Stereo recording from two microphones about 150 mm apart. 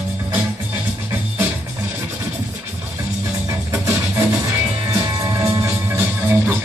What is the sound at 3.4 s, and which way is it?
Music, 20° right (ahead or behind).